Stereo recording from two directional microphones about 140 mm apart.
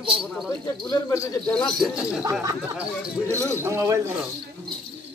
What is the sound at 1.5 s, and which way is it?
Speech, 5° left (ahead or behind).